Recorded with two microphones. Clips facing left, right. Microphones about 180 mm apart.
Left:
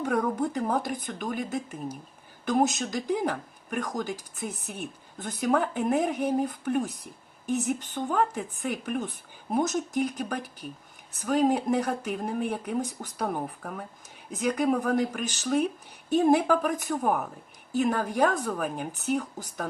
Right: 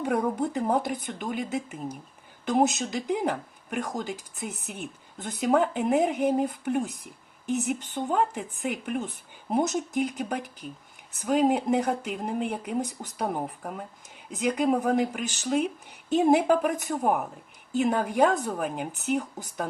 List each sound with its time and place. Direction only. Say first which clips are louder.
0.0 s speech: even; 20° right (ahead or behind)